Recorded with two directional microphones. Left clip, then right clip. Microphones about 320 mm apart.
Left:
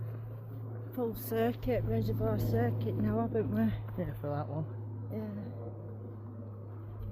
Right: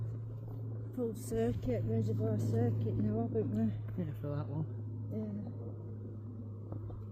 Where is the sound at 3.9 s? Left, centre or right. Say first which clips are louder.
Left 5 dB; centre.